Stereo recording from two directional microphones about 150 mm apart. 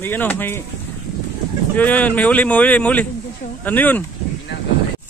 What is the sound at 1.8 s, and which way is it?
Speech, 10° left (ahead or behind).